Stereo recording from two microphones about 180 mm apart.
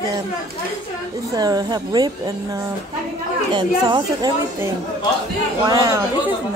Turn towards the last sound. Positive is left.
turn(degrees=-20)  # may be behind; listen again after turning